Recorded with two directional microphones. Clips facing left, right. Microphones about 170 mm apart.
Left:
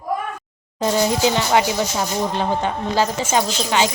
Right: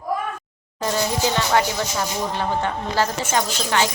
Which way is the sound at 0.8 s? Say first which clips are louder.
Left 4 dB; 20° left (ahead or behind).